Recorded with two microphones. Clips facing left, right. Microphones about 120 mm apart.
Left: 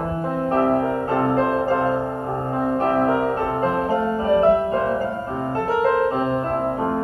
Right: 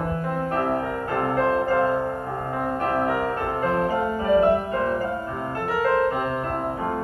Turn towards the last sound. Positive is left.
turn(degrees=25)  # may be behind; listen again after turning